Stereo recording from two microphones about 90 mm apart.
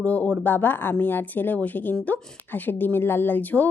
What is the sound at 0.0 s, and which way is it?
A woman's voice, 15° left (ahead or behind).